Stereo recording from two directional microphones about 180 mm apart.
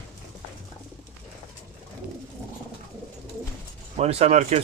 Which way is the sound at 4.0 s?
35° right (ahead or behind).